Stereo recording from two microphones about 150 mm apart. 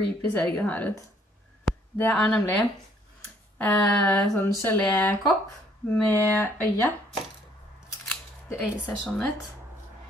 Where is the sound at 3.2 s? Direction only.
5° left (ahead or behind).